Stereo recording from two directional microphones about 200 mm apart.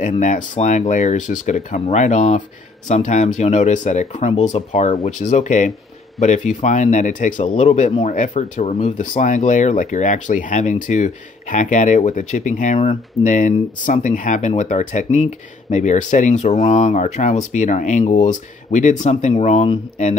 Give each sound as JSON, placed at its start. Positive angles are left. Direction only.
{"t": 0.0, "sound": "speech", "side_deg": 40}